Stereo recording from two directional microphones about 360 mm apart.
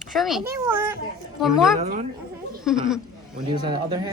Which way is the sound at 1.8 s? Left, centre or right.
Centre.